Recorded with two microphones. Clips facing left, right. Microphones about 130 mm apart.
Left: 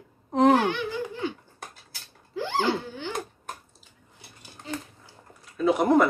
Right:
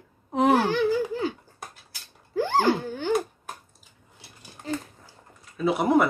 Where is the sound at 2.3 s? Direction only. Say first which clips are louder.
Right 4 dB; 45° right (ahead or behind).